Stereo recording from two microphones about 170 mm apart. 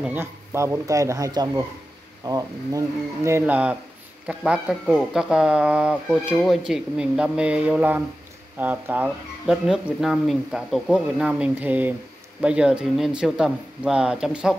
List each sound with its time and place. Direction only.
0.0 s speech: 10° right (ahead or behind)